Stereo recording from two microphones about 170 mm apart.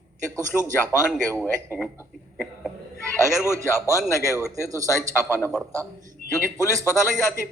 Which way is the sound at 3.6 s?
15° left (ahead or behind).